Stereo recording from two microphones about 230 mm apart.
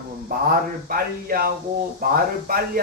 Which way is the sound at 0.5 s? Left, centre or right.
Right.